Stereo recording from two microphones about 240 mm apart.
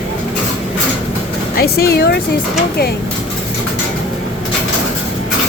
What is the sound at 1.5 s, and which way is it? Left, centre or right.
Speech, left.